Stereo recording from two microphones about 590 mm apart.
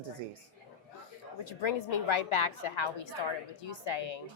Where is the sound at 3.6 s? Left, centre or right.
Left.